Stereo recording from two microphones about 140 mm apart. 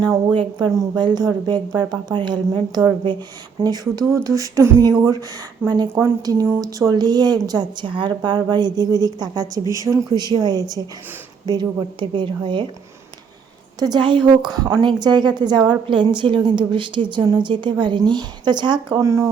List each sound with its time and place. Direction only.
0.3 s a woman's voice: 30° right (ahead or behind)
13.7 s a woman's voice: 30° right (ahead or behind)